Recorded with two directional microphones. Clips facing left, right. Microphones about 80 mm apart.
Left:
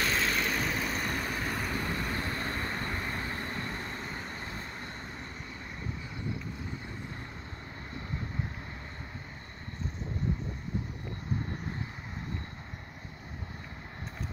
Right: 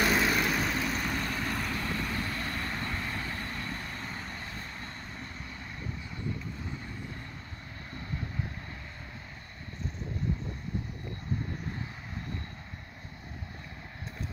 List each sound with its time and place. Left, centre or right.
0.0 s vehicle: centre; by 4.0 s left
4.0 s vehicle: centre
4.3 s vehicle: left